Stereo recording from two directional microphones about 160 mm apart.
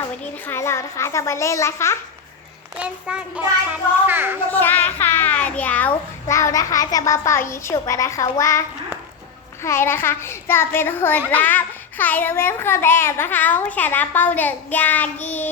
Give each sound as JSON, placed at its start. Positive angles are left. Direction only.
{"t": 0.4, "sound": "a child's voice", "side_deg": 15}
{"t": 2.7, "sound": "a child's voice", "side_deg": -5}
{"t": 4.5, "sound": "a child's voice", "side_deg": 10}
{"t": 9.6, "sound": "a child's voice", "side_deg": 15}